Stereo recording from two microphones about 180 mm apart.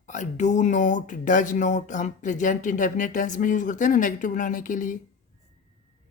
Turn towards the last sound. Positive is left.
turn(degrees=45)  # may be behind; listen again after turning